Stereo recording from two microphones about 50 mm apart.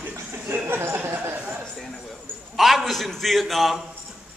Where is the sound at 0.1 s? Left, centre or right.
Right.